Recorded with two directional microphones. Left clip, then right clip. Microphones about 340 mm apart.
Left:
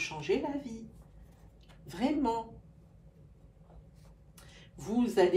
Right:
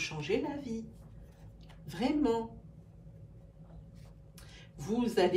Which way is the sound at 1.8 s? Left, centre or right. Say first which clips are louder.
Even; centre.